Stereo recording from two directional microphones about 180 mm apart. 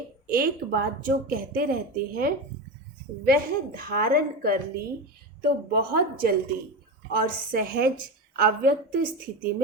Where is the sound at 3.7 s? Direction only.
55° right (ahead or behind).